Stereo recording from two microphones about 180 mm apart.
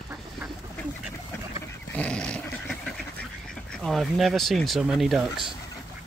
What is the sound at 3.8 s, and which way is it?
Speech, centre (ahead or behind).